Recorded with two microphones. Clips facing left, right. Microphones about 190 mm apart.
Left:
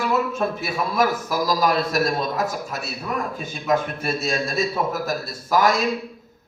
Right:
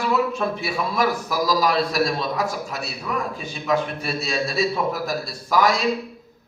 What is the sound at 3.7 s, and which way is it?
A man's voice, 45° left (ahead or behind).